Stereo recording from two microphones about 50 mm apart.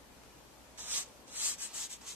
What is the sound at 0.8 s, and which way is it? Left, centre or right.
Rub, right.